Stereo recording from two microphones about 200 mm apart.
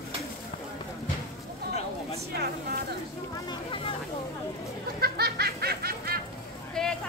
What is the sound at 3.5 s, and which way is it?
Speech, 25° left (ahead or behind).